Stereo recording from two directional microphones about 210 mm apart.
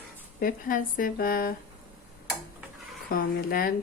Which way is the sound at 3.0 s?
45° left (ahead or behind).